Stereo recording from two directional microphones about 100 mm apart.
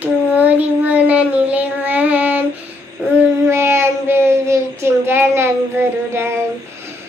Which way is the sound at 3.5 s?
25° right (ahead or behind).